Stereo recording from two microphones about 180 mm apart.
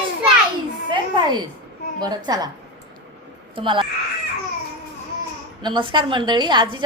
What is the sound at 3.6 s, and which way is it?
Speech, 25° right (ahead or behind).